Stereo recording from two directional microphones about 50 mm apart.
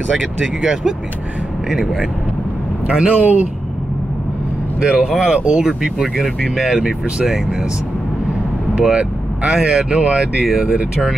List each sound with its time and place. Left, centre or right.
0.2 s speech: centre
1.7 s speech: centre
2.9 s speech: centre
4.8 s speech: centre
5.2 s speech: centre
8.9 s speech: centre